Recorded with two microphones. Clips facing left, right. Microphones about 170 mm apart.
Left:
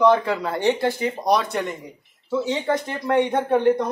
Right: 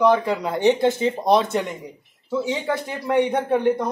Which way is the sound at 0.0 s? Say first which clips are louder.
Even; 10° right (ahead or behind).